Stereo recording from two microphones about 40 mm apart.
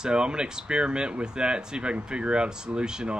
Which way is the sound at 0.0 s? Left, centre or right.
Right.